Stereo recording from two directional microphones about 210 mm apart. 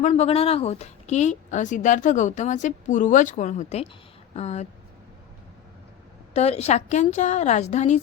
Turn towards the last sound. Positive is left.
turn(degrees=35)  # may be behind; listen again after turning